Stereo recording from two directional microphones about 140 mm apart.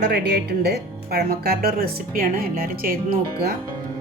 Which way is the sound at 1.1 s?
90° right.